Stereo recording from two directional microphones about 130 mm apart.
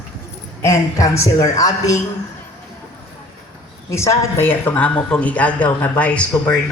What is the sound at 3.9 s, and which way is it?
Speech, 20° left (ahead or behind).